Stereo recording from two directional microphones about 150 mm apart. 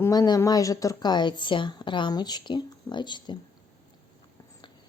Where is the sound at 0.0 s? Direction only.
25° left (ahead or behind).